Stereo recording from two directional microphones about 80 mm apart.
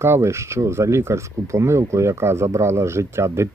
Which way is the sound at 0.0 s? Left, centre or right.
Right.